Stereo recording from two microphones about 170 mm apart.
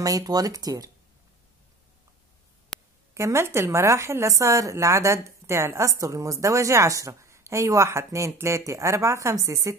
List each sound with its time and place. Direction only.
0.0 s speech: 20° right (ahead or behind)
2.7 s a sound: 5° left (ahead or behind)
3.2 s a woman's voice: 15° right (ahead or behind)